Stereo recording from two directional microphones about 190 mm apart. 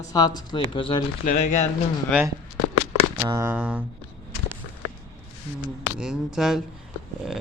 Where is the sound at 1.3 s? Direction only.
40° left (ahead or behind).